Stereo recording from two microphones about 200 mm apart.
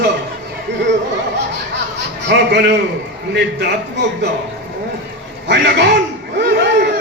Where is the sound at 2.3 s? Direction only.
55° right (ahead or behind).